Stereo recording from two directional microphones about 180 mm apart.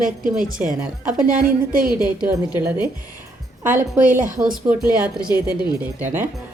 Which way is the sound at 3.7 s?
50° right (ahead or behind).